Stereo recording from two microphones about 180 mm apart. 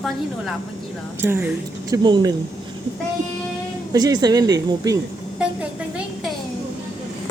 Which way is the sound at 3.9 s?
20° right (ahead or behind).